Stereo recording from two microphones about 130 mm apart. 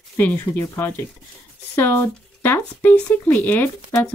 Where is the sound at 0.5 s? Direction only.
20° left (ahead or behind).